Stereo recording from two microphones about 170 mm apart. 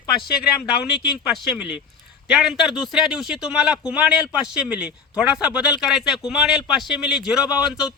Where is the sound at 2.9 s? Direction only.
Centre (ahead or behind).